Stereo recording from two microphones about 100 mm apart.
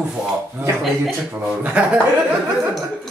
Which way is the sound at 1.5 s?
10° right (ahead or behind).